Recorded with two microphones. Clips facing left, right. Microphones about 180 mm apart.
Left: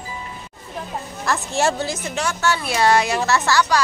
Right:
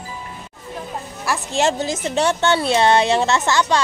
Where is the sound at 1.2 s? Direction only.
15° right (ahead or behind).